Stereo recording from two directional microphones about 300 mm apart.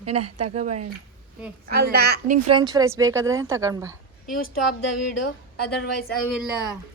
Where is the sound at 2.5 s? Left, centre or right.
Centre.